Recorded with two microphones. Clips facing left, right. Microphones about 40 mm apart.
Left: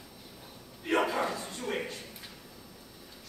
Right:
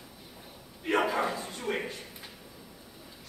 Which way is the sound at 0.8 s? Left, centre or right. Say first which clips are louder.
Right 1 dB; centre.